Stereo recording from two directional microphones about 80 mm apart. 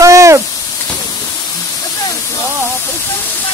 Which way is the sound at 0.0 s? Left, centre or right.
Right.